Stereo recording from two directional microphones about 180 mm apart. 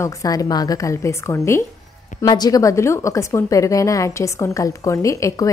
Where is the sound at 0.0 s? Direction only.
20° left (ahead or behind).